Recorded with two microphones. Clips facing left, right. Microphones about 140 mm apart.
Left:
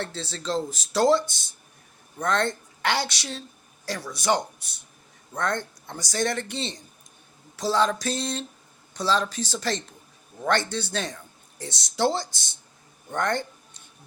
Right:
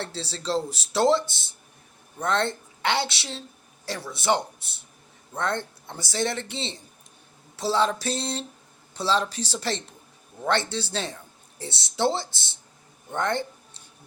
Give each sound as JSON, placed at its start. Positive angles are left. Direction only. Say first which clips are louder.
{"t": 0.0, "sound": "speech", "louder": "even", "side_deg": -30}